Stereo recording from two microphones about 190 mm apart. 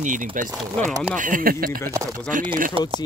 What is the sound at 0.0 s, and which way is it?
Speech, 45° right (ahead or behind).